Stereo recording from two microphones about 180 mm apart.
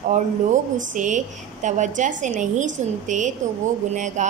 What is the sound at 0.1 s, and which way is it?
A woman's voice, 45° right (ahead or behind).